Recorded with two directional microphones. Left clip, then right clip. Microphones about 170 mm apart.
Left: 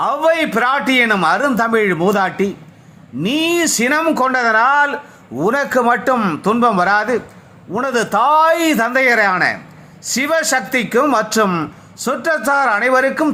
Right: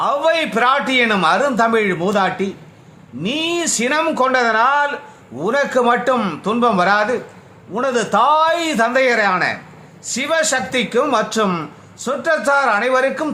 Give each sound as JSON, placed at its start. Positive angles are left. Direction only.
{"t": 0.0, "sound": "a man's voice", "side_deg": 25}